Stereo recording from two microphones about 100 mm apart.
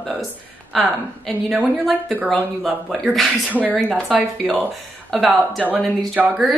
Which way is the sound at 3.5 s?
15° right (ahead or behind).